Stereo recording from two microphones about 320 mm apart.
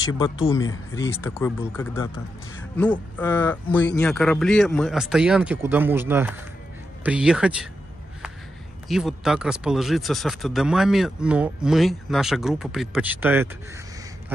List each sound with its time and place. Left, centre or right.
0.7 s speech: left
1.1 s speech: centre
8.8 s speech: centre